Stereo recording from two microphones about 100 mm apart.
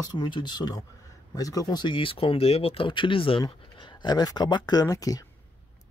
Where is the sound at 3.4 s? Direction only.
45° left (ahead or behind).